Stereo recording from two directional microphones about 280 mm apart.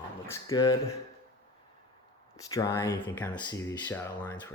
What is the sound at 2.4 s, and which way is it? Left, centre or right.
Speech, centre.